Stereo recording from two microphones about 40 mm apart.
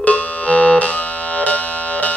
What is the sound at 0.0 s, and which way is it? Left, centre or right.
Music, left.